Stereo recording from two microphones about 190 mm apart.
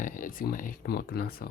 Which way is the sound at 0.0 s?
45° left (ahead or behind).